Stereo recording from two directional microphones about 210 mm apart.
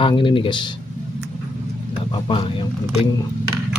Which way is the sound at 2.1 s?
20° left (ahead or behind).